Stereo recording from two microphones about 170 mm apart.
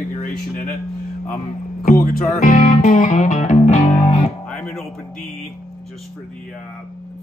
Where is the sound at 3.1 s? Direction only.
40° left (ahead or behind).